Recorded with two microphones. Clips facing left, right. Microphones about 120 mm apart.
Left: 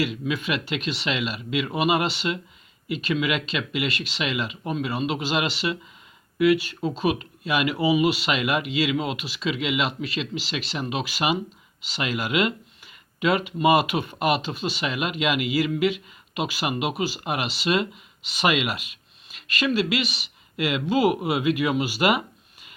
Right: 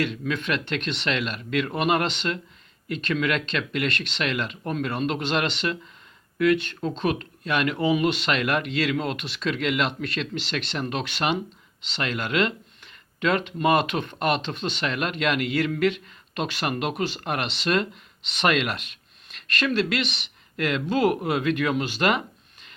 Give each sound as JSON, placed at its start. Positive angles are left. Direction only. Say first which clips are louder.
{"t": 0.0, "sound": "speech", "louder": "left 1 dB", "side_deg": 5}